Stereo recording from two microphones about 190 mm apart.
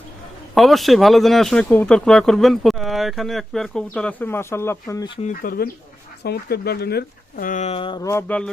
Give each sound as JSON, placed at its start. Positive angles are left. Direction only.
{"t": 0.5, "sound": "speech", "side_deg": 0}
{"t": 5.2, "sound": "speech", "side_deg": 45}